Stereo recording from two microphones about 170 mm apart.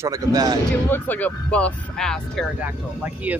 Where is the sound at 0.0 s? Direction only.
20° right (ahead or behind).